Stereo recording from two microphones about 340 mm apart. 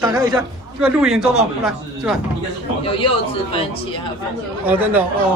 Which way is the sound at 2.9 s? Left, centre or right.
Centre.